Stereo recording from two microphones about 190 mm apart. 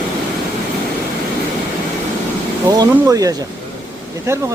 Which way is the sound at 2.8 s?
20° right (ahead or behind).